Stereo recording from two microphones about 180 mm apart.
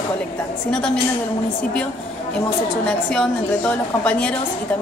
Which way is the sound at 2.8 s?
5° left (ahead or behind).